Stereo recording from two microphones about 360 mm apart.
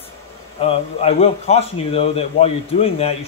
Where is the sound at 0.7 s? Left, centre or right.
Centre.